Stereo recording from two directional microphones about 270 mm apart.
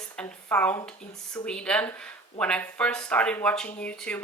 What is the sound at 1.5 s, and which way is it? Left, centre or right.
Speech, centre.